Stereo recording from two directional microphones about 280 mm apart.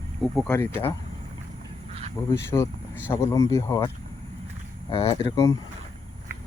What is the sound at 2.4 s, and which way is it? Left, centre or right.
Speech, centre.